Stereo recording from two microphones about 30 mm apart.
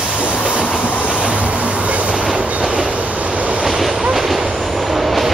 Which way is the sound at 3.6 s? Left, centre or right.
Centre.